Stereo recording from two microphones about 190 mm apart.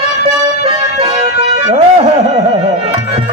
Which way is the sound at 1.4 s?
35° right (ahead or behind).